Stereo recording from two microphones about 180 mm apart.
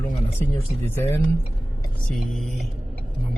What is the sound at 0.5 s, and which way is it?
Speech, 15° left (ahead or behind).